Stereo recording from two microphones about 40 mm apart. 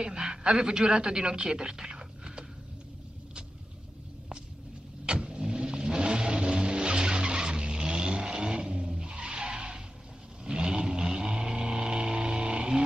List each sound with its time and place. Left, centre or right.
0.0 s a woman's voice: centre
5.0 s vehicle: right
8.8 s skidding: centre
10.4 s a sound: centre